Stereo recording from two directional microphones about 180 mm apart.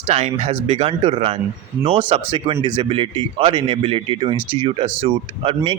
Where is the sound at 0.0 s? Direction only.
35° right (ahead or behind).